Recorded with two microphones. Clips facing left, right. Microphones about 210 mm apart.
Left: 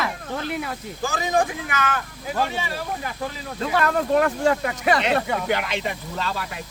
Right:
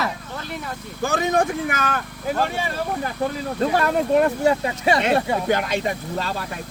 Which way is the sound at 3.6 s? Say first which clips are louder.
Right 3 dB; 40° right (ahead or behind).